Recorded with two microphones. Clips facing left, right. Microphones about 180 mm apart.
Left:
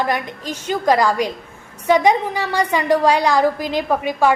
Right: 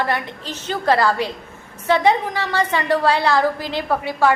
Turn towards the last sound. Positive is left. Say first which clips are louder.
# left 2 dB
turn(degrees=15)  # may be behind; listen again after turning